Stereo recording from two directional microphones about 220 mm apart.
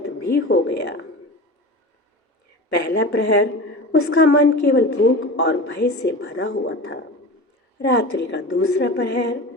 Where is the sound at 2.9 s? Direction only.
50° left (ahead or behind).